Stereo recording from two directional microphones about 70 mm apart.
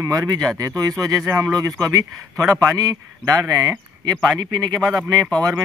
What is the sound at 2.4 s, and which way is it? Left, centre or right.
Speech, centre.